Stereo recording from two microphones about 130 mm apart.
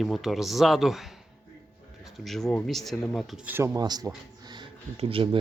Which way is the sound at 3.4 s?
20° right (ahead or behind).